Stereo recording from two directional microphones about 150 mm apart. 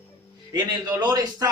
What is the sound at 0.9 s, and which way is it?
Speech, 25° right (ahead or behind).